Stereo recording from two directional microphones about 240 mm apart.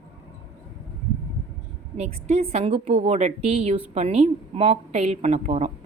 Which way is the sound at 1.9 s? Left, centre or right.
Right.